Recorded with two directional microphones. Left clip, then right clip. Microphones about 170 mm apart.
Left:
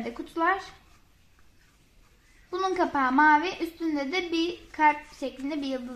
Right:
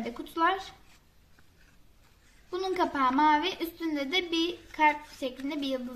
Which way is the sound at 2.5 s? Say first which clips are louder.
Left 3 dB; 35° left (ahead or behind).